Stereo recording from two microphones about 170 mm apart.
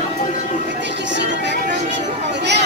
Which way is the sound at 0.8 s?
90° right.